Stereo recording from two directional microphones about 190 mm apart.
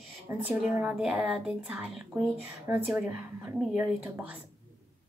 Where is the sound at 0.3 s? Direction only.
10° right (ahead or behind).